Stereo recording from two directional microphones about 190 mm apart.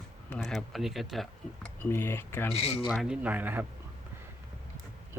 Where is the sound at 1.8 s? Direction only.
10° left (ahead or behind).